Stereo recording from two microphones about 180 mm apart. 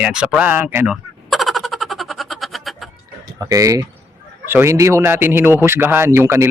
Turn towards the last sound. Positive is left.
turn(degrees=-15)  # may be behind; listen again after turning